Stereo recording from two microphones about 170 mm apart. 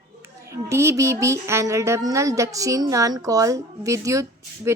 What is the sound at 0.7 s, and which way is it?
A woman's voice, 15° right (ahead or behind).